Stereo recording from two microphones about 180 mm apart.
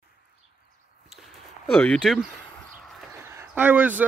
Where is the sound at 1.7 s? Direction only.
5° left (ahead or behind).